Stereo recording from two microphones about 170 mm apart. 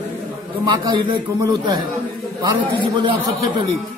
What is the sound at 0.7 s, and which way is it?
A man's voice, 25° right (ahead or behind).